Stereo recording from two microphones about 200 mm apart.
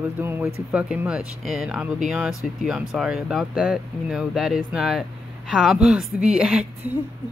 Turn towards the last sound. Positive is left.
turn(degrees=-5)  # may be behind; listen again after turning